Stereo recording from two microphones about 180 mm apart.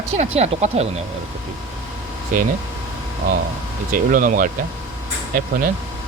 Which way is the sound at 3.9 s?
50° right (ahead or behind).